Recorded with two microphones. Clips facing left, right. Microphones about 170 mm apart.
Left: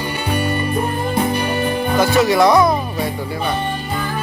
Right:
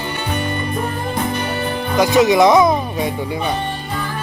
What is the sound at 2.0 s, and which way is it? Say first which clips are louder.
Speech: right 2 dB; 20° right (ahead or behind).